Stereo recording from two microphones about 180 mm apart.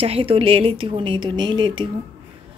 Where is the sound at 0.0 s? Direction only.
30° right (ahead or behind).